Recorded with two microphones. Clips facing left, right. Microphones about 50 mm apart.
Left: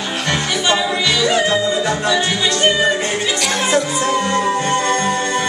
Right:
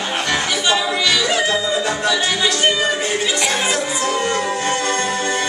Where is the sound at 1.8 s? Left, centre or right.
Centre.